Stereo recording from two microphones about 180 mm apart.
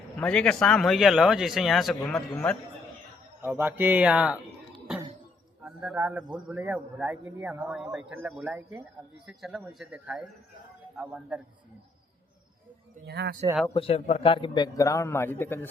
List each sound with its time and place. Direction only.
0.2 s speech: 5° left (ahead or behind)
2.3 s a man's voice: 10° left (ahead or behind)
3.4 s a man's voice: 10° right (ahead or behind)
5.6 s a man's voice: 10° right (ahead or behind)
13.1 s speech: 70° right (ahead or behind)
13.7 s a man's voice: 35° left (ahead or behind); by 15.6 s 10° left (ahead or behind)